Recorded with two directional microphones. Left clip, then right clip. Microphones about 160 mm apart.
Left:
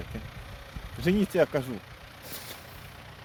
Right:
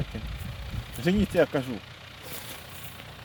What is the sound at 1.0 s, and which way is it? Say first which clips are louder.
Speech: right 1 dB; 10° left (ahead or behind).